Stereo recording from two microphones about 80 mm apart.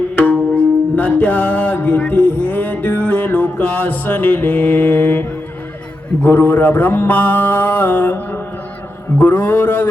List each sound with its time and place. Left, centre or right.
0.2 s music: centre
6.2 s a man's voice: left